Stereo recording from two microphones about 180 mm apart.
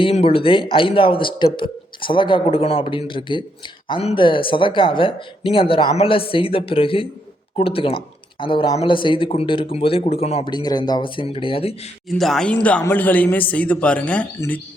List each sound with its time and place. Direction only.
0.0 s speech: 35° left (ahead or behind)
12.0 s speech: centre (ahead or behind)